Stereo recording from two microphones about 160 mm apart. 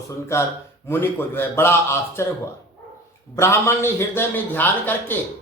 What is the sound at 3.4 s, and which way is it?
Speech, 15° left (ahead or behind).